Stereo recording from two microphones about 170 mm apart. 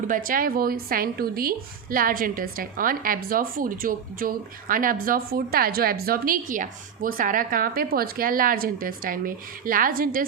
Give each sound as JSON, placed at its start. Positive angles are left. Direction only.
{"t": 0.1, "sound": "a woman's voice", "side_deg": -55}